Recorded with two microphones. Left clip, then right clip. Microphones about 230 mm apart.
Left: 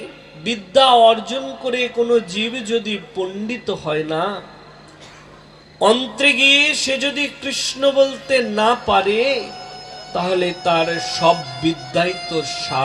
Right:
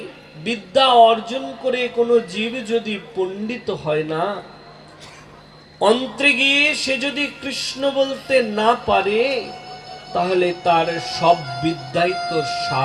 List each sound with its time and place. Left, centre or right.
0.4 s speech: centre
5.8 s speech: centre